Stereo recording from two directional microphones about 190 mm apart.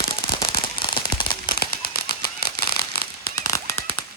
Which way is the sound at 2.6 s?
55° left (ahead or behind).